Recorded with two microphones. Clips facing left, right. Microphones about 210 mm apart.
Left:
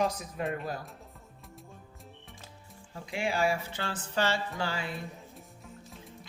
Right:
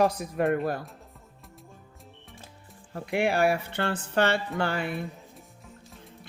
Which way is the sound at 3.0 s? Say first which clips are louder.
Right 6 dB; 60° right (ahead or behind).